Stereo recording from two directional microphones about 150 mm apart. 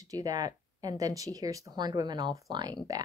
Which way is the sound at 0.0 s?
25° right (ahead or behind).